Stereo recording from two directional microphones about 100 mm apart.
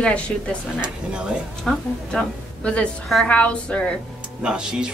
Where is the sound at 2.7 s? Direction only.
5° left (ahead or behind).